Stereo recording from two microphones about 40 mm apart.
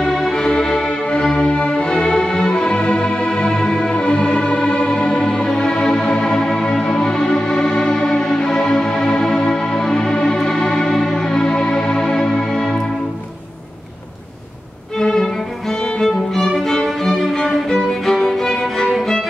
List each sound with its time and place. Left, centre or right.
0.0 s music: centre
0.3 s music: centre
15.0 s violin: centre
16.8 s music: centre